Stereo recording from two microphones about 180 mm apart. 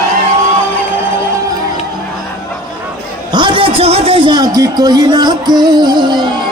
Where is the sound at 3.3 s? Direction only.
25° right (ahead or behind).